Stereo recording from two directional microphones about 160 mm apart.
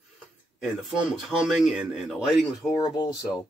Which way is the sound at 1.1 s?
Centre (ahead or behind).